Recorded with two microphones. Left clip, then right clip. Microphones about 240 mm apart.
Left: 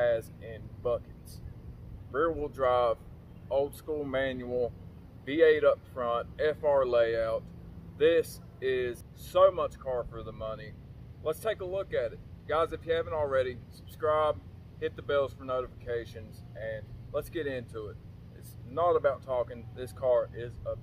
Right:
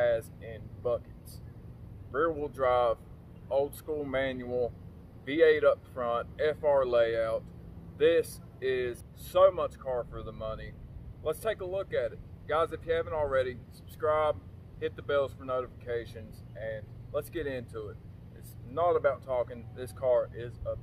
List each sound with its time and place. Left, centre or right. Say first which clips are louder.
0.0 s air conditioning: even; centre
2.1 s speech: even; centre